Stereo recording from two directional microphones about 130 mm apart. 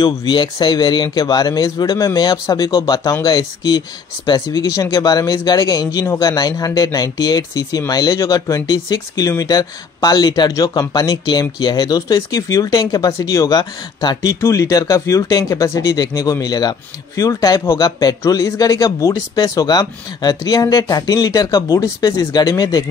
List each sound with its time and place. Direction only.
0.0 s speech: 35° left (ahead or behind)